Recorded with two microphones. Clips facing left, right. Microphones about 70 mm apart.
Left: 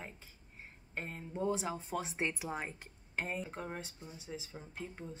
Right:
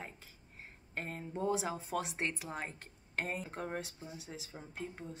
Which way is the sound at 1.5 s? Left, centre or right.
Centre.